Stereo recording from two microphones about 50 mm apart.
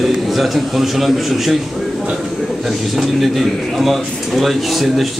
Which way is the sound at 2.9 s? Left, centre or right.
Centre.